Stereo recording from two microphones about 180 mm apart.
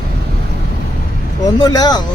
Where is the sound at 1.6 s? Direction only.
20° left (ahead or behind).